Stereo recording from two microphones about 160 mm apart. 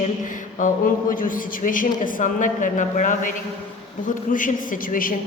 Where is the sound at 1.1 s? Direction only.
60° left (ahead or behind).